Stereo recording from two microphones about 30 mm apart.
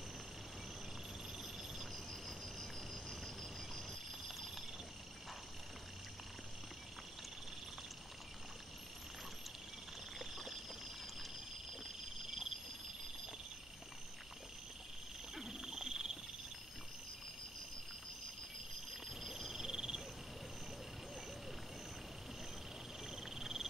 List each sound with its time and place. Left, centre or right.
1.8 s cricket: centre
4.3 s a sound: centre
10.1 s a sound: centre
11.8 s frog: centre
15.3 s wild animals: centre
19.0 s frog: centre
23.0 s frog: centre